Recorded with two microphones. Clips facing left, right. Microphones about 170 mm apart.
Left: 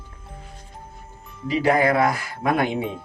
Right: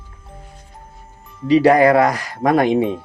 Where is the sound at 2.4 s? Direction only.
40° right (ahead or behind).